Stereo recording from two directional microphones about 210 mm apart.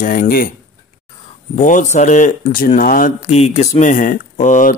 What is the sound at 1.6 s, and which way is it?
A man's voice, 35° left (ahead or behind).